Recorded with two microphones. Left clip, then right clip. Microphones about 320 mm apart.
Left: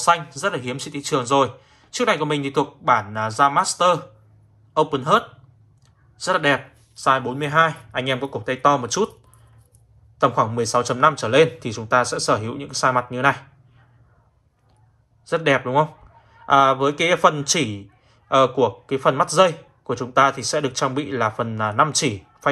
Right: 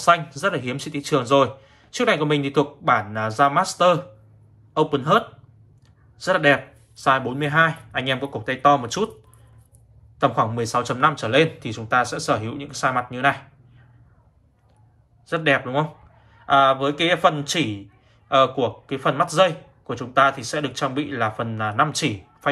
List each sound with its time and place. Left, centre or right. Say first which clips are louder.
0.0 s speech: right 1 dB; centre
10.1 s speech: left 2 dB; centre
15.2 s speech: left 1 dB; centre